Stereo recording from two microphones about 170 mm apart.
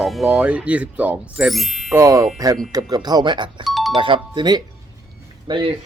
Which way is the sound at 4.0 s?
30° right (ahead or behind).